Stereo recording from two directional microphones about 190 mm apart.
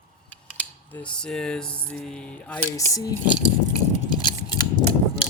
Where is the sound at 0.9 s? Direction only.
5° left (ahead or behind).